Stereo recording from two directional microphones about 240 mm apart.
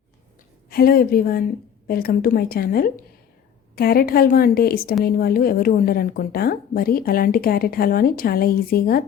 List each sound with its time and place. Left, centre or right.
0.7 s a woman's voice: left